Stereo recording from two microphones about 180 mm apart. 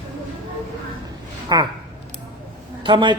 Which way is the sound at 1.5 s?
20° right (ahead or behind).